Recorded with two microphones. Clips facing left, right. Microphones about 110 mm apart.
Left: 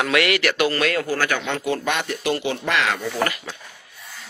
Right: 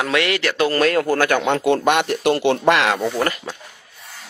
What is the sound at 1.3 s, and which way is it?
Speech, 60° right (ahead or behind).